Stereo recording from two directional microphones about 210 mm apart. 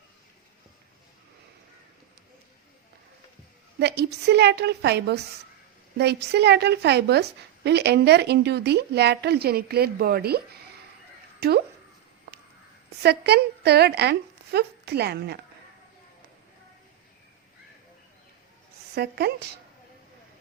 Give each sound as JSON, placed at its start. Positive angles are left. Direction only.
{"t": 3.8, "sound": "a woman's voice", "side_deg": -50}
{"t": 13.0, "sound": "a woman's voice", "side_deg": -50}
{"t": 18.9, "sound": "a woman's voice", "side_deg": -50}